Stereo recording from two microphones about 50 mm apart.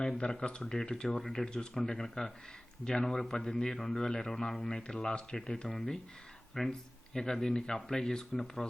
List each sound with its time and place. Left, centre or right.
0.2 s a man's voice: left; by 8.6 s centre